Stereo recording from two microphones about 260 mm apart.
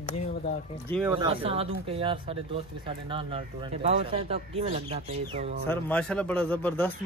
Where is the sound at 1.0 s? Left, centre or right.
Centre.